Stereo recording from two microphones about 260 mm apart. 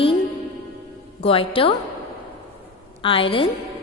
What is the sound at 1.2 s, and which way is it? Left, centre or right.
Speech, left.